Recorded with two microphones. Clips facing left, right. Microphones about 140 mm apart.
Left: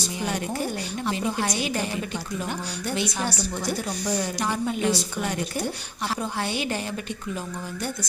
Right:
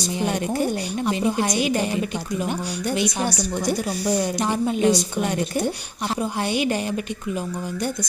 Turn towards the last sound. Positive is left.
turn(degrees=-15)  # may be behind; listen again after turning